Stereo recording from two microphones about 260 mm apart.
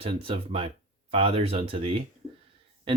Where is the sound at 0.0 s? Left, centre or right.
Right.